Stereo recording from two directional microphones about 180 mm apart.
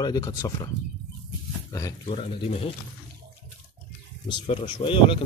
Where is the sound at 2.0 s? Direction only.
35° left (ahead or behind).